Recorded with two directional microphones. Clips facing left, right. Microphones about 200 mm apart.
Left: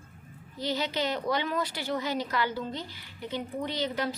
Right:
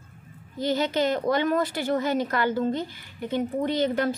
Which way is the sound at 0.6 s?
50° right (ahead or behind).